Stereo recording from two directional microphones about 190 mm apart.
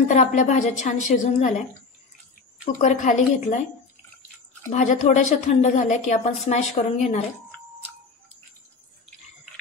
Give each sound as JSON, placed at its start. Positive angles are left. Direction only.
{"t": 0.1, "sound": "a woman's voice", "side_deg": 40}
{"t": 2.6, "sound": "a woman's voice", "side_deg": 40}
{"t": 4.6, "sound": "a woman's voice", "side_deg": 40}